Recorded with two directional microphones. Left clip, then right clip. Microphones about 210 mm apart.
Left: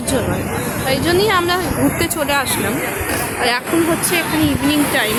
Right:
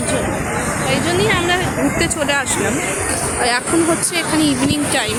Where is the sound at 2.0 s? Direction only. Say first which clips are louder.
Even; 15° left (ahead or behind).